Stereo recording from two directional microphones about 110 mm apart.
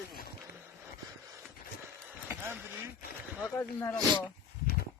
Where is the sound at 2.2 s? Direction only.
15° right (ahead or behind).